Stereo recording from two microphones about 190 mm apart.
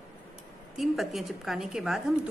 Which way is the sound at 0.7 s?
Centre (ahead or behind).